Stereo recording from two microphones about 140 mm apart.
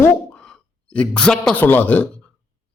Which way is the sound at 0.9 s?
10° left (ahead or behind).